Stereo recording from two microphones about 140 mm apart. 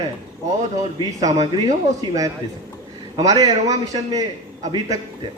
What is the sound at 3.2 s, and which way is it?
A man's voice, 25° right (ahead or behind).